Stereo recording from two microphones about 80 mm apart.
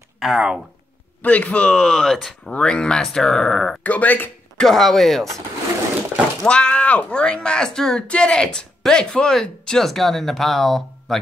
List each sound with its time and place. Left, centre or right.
0.2 s speech: centre
1.2 s speech: centre
3.8 s speech: centre
4.6 s speech: centre
6.4 s speech: centre